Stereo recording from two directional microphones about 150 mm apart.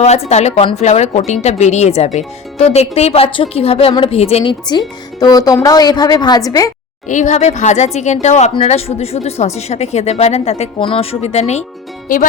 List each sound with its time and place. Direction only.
0.3 s speech: 50° left (ahead or behind)
4.7 s a woman's voice: 25° left (ahead or behind)
7.1 s speech: 55° left (ahead or behind)
12.0 s speech: 65° left (ahead or behind)